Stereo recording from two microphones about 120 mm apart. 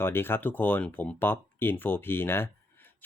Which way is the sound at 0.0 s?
20° left (ahead or behind).